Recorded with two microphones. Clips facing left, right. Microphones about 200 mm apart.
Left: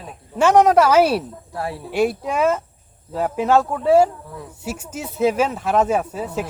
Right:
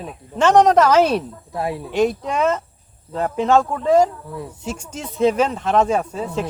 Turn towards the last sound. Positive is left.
turn(degrees=5)  # may be behind; listen again after turning